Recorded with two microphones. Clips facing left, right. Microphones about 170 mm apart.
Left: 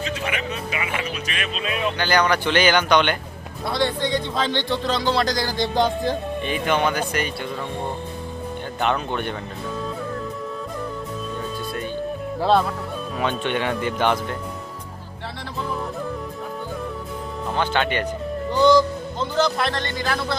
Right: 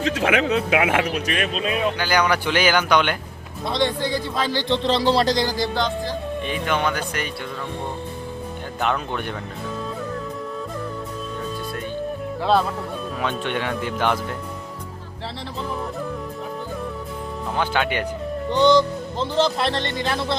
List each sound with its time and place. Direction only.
0.0 s speech: 90° right
1.3 s speech: 45° right (ahead or behind)
2.0 s speech: 10° right (ahead or behind)
3.7 s speech: 20° right (ahead or behind)
4.0 s speech: 5° right (ahead or behind)
4.7 s speech: 30° right (ahead or behind)
6.4 s speech: centre (ahead or behind)
8.8 s speech: centre (ahead or behind)
12.4 s speech: centre (ahead or behind)
17.6 s speech: 10° right (ahead or behind)
18.5 s speech: 20° right (ahead or behind)